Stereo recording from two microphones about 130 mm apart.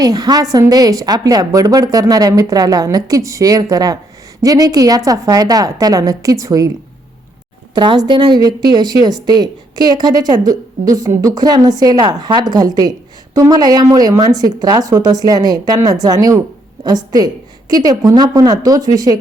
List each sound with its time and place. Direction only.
0.0 s a woman's voice: 30° right (ahead or behind)
7.8 s a woman's voice: 35° right (ahead or behind)